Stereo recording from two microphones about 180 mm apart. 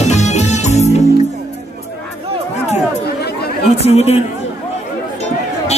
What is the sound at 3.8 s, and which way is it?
Chatter, 35° left (ahead or behind).